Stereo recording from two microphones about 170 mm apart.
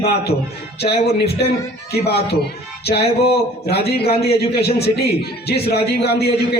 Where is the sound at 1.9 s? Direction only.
70° left (ahead or behind).